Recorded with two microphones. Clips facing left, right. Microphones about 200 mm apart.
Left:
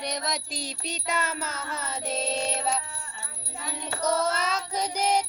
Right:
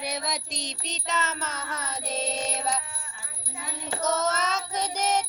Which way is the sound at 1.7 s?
30° left (ahead or behind).